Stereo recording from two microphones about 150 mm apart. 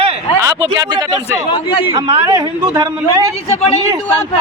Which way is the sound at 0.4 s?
25° right (ahead or behind).